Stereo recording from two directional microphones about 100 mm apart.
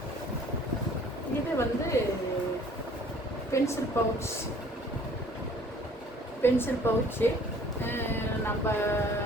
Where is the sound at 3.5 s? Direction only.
30° left (ahead or behind).